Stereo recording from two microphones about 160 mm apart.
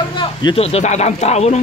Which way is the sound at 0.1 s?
30° left (ahead or behind).